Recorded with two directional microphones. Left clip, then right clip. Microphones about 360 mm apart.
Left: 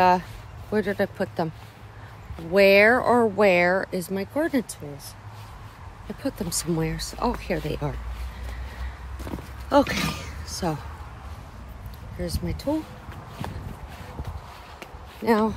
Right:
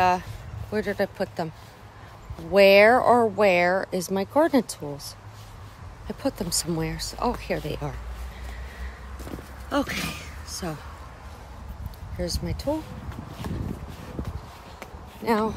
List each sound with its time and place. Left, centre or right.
0.0 s speech: centre
2.5 s speech: centre
6.2 s speech: centre
9.7 s speech: centre
13.4 s a sound: centre
15.2 s speech: centre